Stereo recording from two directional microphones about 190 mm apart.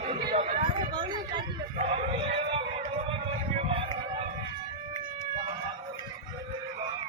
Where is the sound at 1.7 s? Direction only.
35° right (ahead or behind).